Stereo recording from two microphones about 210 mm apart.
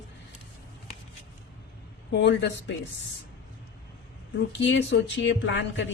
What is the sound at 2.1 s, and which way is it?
Speech, 55° left (ahead or behind).